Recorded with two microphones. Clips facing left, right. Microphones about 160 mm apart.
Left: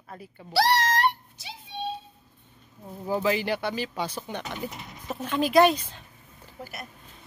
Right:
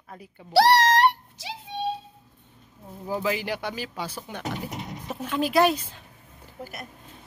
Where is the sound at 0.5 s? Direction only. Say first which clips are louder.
Right 5 dB; 70° right (ahead or behind); by 1.5 s 90° right.